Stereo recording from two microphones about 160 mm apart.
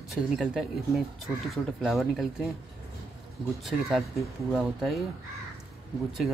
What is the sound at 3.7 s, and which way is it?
Speech, centre (ahead or behind).